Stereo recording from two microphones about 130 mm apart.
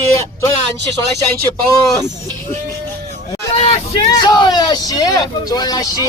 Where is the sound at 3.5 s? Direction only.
50° left (ahead or behind).